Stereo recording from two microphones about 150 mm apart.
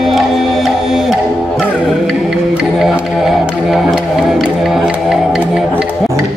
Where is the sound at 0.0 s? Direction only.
Centre (ahead or behind).